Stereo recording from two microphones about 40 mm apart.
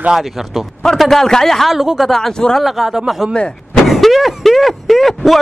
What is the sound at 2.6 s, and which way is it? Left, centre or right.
A man's voice, centre.